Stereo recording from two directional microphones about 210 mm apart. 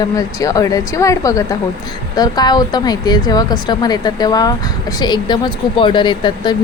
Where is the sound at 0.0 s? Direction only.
15° left (ahead or behind).